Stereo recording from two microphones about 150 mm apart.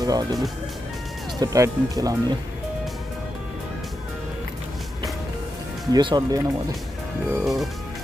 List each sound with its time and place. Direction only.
0.0 s speech: 25° right (ahead or behind)
1.4 s speech: 25° right (ahead or behind)
5.9 s speech: 30° right (ahead or behind)
7.2 s speech: 5° right (ahead or behind)